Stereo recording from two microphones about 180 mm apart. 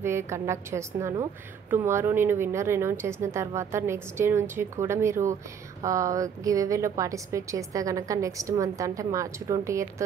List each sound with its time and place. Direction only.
0.0 s speech: 15° right (ahead or behind)